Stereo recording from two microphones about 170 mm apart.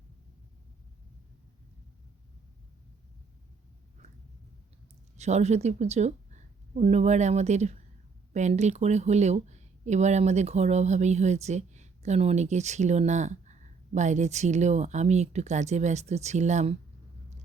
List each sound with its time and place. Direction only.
5.1 s speech: 40° right (ahead or behind)